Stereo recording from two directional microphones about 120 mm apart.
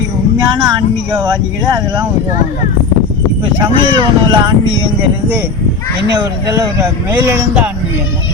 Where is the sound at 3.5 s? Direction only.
35° right (ahead or behind).